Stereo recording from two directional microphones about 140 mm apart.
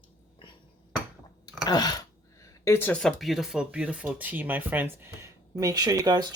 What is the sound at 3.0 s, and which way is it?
Speech, centre (ahead or behind).